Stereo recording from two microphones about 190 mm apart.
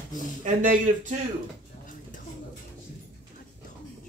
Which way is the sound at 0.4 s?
45° right (ahead or behind).